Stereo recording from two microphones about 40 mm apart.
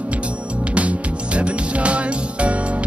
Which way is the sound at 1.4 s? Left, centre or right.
Right.